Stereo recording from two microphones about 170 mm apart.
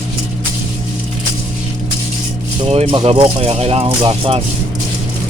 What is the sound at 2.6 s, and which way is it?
Speech, 35° right (ahead or behind).